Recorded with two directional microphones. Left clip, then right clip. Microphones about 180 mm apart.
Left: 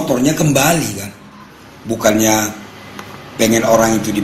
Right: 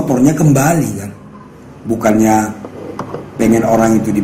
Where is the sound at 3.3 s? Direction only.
50° left (ahead or behind).